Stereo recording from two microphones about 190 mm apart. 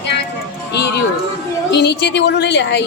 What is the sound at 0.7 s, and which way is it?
Speech, 60° left (ahead or behind).